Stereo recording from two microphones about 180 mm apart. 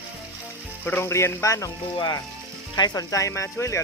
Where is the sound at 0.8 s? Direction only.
10° left (ahead or behind).